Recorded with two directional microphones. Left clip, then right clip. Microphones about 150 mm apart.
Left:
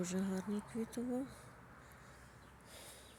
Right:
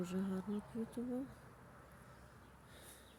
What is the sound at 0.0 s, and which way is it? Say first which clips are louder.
Speech: left 2 dB; centre (ahead or behind).